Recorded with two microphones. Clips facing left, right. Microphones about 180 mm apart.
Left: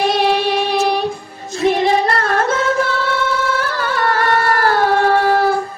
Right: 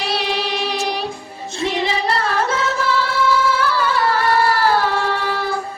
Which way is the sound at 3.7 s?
50° left (ahead or behind).